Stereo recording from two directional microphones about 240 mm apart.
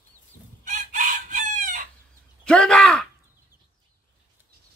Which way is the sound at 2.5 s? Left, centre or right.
Centre.